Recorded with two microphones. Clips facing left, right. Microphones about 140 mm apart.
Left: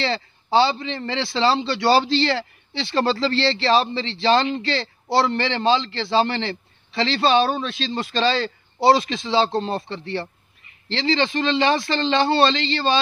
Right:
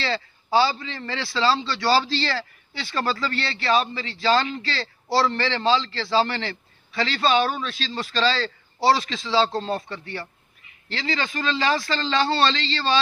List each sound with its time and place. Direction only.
0.0 s a man's voice: 25° left (ahead or behind)